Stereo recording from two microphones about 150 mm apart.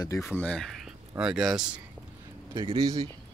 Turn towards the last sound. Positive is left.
turn(degrees=-25)  # may be behind; listen again after turning